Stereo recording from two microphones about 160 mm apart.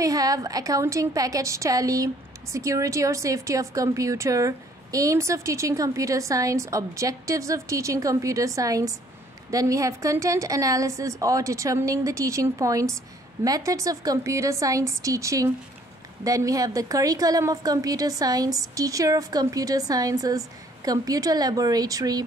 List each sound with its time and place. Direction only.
0.0 s a woman's voice: 20° right (ahead or behind)